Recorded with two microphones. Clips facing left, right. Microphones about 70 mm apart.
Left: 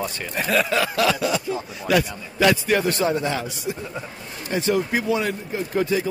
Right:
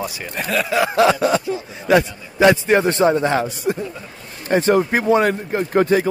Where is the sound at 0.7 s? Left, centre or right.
Right.